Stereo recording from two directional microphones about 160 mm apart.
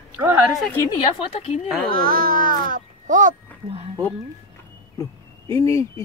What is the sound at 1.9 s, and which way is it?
A child's voice, 65° right (ahead or behind).